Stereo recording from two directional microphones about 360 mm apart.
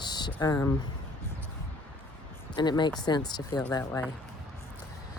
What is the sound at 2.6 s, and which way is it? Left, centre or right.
Speech, centre.